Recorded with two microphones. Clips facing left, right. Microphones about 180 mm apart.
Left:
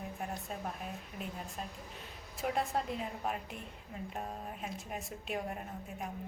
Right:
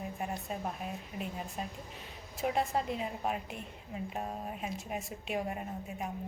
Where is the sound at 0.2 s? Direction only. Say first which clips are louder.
Right 3 dB; centre (ahead or behind).